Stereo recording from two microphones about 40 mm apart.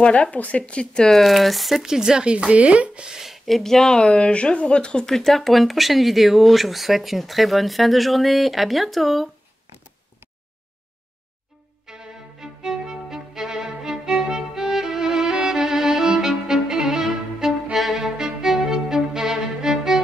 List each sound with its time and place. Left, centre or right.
0.0 s speech: left
1.0 s speech: centre
2.3 s speech: right
3.4 s speech: centre
4.3 s speech: left
5.0 s speech: centre
11.8 s violin: centre